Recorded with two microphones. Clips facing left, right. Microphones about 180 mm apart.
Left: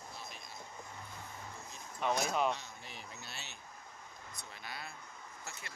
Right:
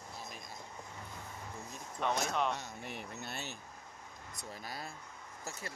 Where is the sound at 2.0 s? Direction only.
5° left (ahead or behind).